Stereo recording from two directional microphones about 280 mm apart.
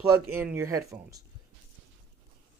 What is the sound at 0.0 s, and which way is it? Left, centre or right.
Speech, centre.